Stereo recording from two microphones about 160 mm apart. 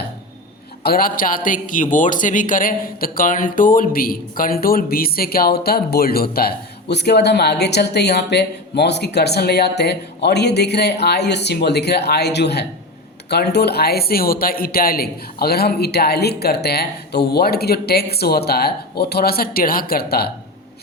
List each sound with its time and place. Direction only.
0.8 s a man's voice: 70° left (ahead or behind)